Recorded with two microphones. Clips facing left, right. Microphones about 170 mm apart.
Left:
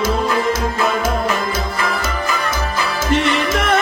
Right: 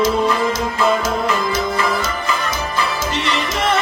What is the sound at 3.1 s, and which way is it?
Music, 50° left (ahead or behind).